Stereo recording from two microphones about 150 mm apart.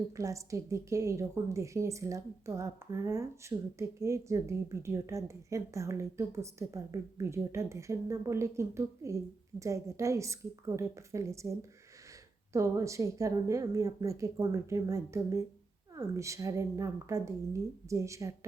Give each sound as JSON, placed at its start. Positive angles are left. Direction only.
{"t": 0.2, "sound": "a woman's voice", "side_deg": -20}
{"t": 12.5, "sound": "a woman's voice", "side_deg": -20}